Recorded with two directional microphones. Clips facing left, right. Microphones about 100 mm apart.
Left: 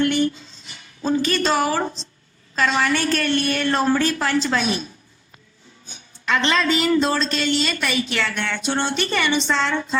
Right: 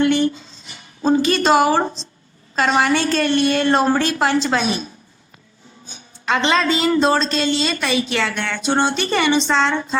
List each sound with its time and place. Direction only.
0.0 s a woman's voice: 30° right (ahead or behind)
6.2 s a woman's voice: 25° right (ahead or behind)